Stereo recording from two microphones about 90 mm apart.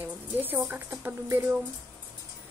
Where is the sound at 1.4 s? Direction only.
15° right (ahead or behind).